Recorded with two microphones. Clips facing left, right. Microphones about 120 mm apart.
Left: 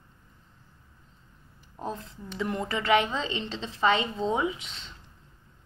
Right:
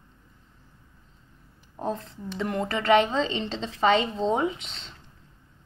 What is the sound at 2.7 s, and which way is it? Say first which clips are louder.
Speech: right 4 dB; 50° right (ahead or behind).